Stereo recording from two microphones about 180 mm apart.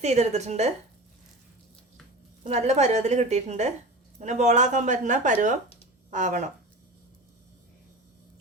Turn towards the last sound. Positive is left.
turn(degrees=-40)  # may be behind; listen again after turning